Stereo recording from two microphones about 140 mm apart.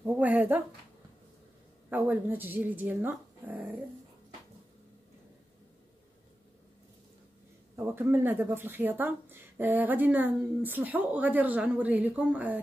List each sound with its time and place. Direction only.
0.0 s a sound: 10° right (ahead or behind)
1.9 s a woman's voice: 15° right (ahead or behind)
7.7 s a man's voice: 15° right (ahead or behind)